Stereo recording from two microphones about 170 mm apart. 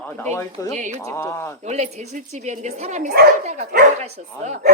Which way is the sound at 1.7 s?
40° right (ahead or behind).